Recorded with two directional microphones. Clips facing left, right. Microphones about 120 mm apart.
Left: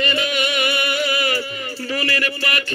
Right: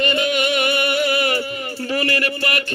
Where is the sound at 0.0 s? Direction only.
50° right (ahead or behind).